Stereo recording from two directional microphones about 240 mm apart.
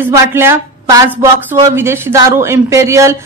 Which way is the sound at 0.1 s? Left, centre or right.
Centre.